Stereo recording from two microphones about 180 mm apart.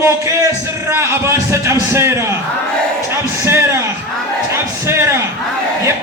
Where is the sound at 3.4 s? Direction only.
15° right (ahead or behind).